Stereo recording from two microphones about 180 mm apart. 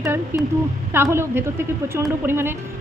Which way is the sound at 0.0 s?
15° right (ahead or behind).